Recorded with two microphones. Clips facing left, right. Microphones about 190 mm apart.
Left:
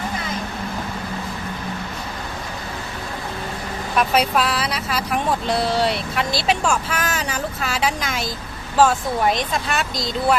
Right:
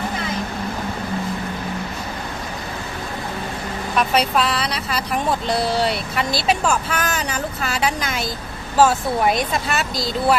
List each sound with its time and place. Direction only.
3.9 s speech: 5° left (ahead or behind)